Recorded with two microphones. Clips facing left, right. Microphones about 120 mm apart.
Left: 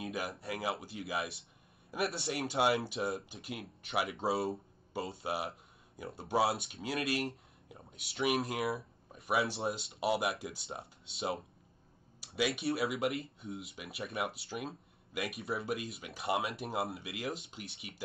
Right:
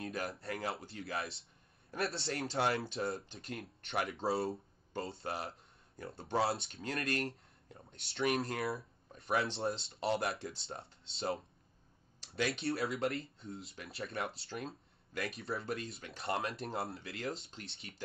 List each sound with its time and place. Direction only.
0.0 s speech: 5° left (ahead or behind)